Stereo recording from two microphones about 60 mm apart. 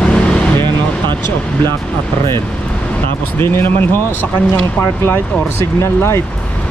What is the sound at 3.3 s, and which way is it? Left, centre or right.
Speech, left.